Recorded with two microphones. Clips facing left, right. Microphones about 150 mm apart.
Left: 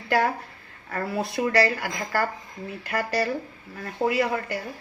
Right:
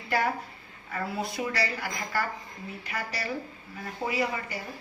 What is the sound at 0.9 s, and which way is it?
A woman's voice, 65° left (ahead or behind).